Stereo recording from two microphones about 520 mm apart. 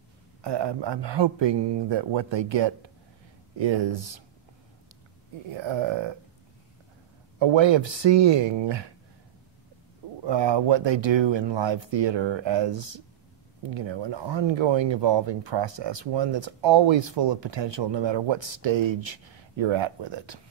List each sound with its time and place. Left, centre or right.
0.4 s speech: right
5.5 s speech: right
7.3 s speech: right
10.2 s speech: right